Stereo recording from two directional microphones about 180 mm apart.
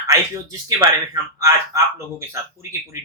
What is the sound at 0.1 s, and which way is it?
Speech, 15° right (ahead or behind).